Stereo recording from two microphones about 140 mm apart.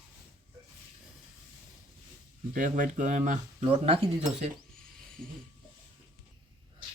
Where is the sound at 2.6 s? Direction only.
65° right (ahead or behind); by 4.5 s 45° right (ahead or behind).